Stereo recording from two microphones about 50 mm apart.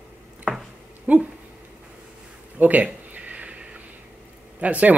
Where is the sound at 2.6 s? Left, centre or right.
Right.